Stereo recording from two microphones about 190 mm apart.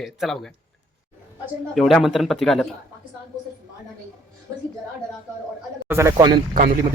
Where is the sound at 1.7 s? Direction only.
Centre (ahead or behind).